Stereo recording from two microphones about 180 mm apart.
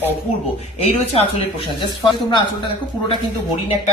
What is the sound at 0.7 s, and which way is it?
Speech, 35° left (ahead or behind).